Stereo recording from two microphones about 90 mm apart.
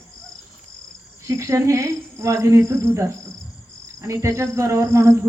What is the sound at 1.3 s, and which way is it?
Speech, 35° right (ahead or behind).